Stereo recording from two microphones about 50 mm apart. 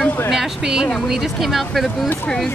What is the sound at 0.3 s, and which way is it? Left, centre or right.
A woman's voice, centre.